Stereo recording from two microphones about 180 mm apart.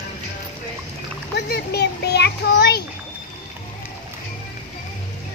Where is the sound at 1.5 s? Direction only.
65° left (ahead or behind).